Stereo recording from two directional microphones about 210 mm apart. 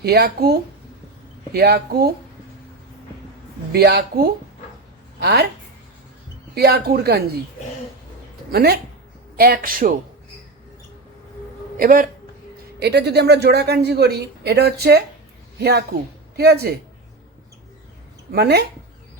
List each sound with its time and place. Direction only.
0.0 s speech: 50° right (ahead or behind)
1.5 s speech: 50° right (ahead or behind)
3.7 s speech: 50° right (ahead or behind)
6.5 s speech: 50° right (ahead or behind)
8.5 s speech: 50° right (ahead or behind)
11.8 s a woman's voice: 45° right (ahead or behind)
18.3 s speech: 50° right (ahead or behind)